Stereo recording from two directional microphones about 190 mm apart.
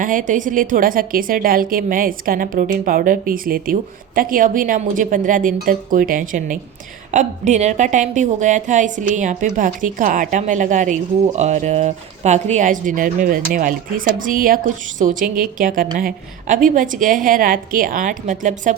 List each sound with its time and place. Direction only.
0.0 s a woman's voice: 45° right (ahead or behind)